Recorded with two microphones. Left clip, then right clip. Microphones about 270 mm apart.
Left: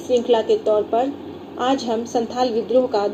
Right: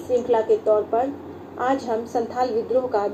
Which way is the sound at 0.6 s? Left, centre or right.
Left.